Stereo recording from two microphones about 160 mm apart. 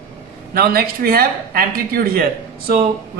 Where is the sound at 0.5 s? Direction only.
70° right (ahead or behind).